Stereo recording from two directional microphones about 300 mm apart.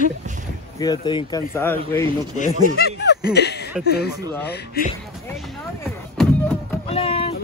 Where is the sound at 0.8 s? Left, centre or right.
Centre.